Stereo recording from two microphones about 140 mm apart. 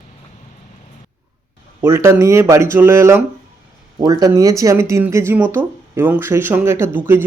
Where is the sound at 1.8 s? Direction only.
20° right (ahead or behind).